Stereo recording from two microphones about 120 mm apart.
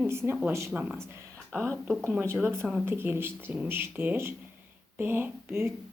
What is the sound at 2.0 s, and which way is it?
A woman's voice, 20° right (ahead or behind).